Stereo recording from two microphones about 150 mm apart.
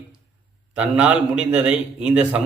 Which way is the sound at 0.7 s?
10° right (ahead or behind).